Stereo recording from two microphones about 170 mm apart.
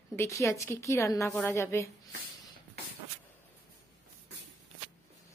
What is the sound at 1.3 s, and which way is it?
Speech, 5° left (ahead or behind).